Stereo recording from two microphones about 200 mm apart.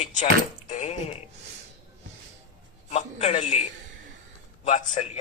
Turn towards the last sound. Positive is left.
turn(degrees=35)  # may be behind; listen again after turning